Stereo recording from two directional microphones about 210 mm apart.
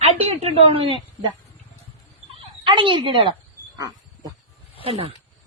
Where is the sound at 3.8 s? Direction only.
15° right (ahead or behind).